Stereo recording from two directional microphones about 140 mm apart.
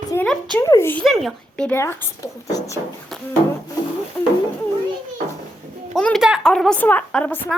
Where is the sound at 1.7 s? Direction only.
15° left (ahead or behind).